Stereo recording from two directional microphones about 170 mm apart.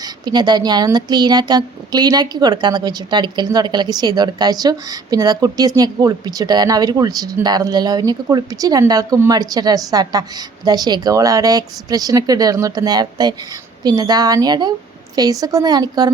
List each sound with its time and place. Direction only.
0.0 s speech: 25° right (ahead or behind)